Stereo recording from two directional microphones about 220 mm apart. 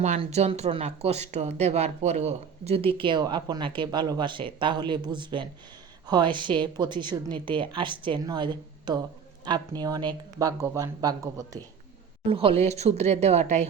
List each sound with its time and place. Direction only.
0.0 s speech: 30° right (ahead or behind)